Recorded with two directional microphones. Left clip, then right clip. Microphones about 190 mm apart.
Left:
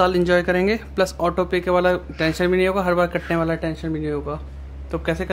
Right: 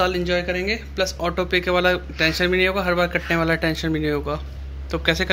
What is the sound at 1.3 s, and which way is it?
Speech, 15° left (ahead or behind).